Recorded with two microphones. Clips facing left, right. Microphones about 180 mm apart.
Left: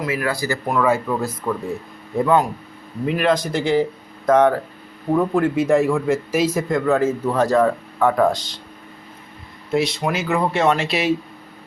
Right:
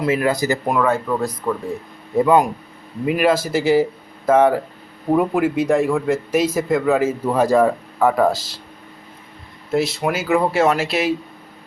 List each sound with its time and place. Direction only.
0.0 s speech: 25° right (ahead or behind)
0.8 s speech: 5° left (ahead or behind)
2.1 s speech: 10° right (ahead or behind)
5.5 s speech: centre (ahead or behind)
9.7 s speech: centre (ahead or behind)